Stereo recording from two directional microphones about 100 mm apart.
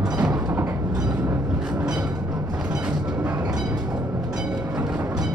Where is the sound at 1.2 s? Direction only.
10° right (ahead or behind).